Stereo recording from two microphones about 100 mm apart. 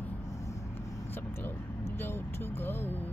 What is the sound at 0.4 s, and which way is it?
Vehicle, 30° left (ahead or behind).